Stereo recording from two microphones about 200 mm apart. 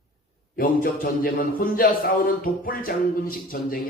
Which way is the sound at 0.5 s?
45° left (ahead or behind).